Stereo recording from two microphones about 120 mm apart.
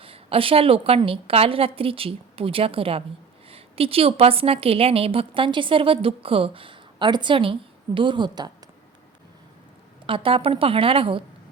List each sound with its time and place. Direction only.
0.0 s a woman's voice: 50° right (ahead or behind)
10.1 s a woman's voice: 50° right (ahead or behind)